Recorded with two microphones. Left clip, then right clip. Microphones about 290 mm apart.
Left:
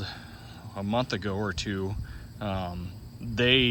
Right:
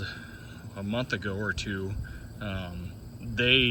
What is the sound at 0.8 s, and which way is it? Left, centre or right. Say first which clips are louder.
Speech: left 3 dB; centre.